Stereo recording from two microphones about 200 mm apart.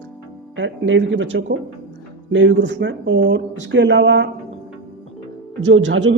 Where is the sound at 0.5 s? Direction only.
70° right (ahead or behind).